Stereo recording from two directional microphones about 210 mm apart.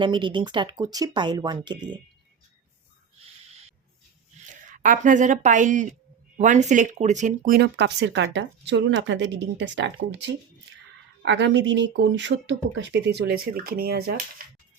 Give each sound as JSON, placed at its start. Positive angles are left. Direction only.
{"t": 0.0, "sound": "speech", "side_deg": -25}
{"t": 4.7, "sound": "a woman's voice", "side_deg": -40}
{"t": 11.3, "sound": "speech", "side_deg": -60}